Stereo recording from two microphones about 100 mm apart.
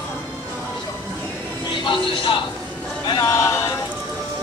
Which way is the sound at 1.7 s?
55° left (ahead or behind).